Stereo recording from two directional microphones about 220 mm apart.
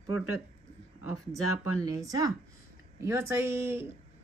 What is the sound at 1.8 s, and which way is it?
A woman's voice, 15° right (ahead or behind).